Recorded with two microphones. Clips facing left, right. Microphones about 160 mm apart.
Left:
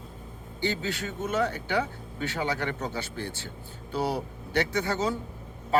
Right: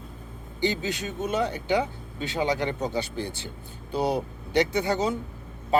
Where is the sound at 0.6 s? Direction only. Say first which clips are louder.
Right 3 dB; 15° right (ahead or behind).